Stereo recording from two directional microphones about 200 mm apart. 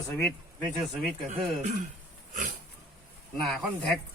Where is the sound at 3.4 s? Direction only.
Centre (ahead or behind).